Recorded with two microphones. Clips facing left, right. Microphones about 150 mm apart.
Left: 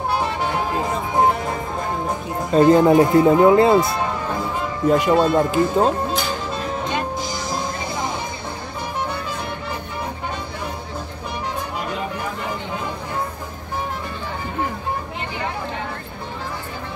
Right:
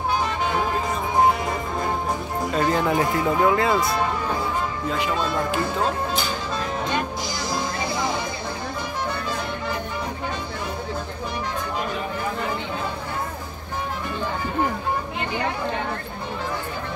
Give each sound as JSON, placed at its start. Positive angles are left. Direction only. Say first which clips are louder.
{"t": 2.5, "sound": "speech", "louder": "left 10 dB", "side_deg": 35}
{"t": 4.8, "sound": "speech", "louder": "left 12 dB", "side_deg": 45}